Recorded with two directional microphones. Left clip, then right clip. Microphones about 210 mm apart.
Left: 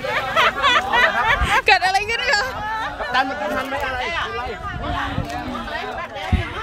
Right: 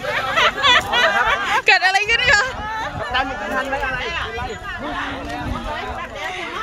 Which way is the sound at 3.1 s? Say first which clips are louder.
Left 2 dB; 60° left (ahead or behind).